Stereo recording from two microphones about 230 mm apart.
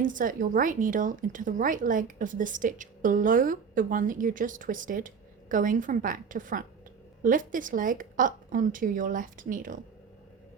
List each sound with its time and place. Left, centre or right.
0.0 s speech: right